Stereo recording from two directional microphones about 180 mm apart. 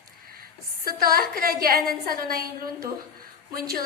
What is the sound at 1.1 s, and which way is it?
A woman's voice, 55° right (ahead or behind).